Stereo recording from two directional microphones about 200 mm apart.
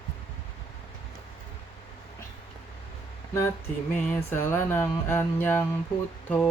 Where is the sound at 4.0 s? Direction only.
10° left (ahead or behind).